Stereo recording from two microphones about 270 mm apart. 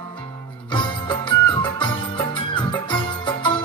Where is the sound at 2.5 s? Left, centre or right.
Centre.